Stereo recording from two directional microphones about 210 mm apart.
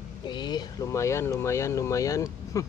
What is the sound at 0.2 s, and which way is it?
Speech, 20° left (ahead or behind).